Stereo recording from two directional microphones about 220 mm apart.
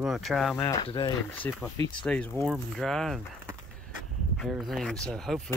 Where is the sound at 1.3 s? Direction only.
10° left (ahead or behind).